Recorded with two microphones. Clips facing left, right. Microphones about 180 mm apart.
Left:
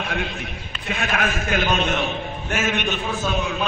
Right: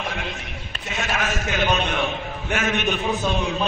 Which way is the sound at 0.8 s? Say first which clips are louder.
Left 2 dB; 55° left (ahead or behind).